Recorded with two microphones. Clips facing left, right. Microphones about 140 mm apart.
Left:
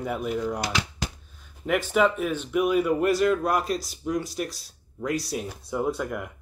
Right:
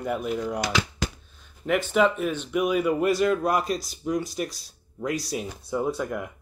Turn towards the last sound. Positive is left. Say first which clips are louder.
# even
turn(degrees=0)  # may be behind; listen again after turning